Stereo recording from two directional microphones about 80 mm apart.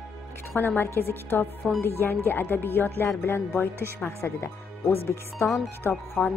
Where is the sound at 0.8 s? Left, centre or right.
Left.